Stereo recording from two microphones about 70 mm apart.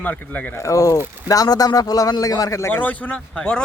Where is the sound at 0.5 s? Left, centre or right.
Left.